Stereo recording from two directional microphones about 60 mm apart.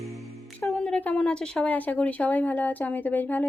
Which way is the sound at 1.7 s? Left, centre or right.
Left.